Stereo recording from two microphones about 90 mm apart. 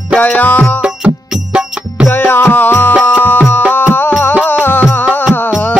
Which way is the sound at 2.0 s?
20° left (ahead or behind).